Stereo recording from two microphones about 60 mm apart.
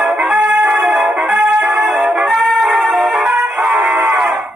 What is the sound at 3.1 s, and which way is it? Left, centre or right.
Music, right.